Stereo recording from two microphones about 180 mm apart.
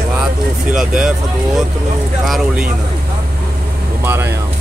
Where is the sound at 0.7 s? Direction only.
5° right (ahead or behind).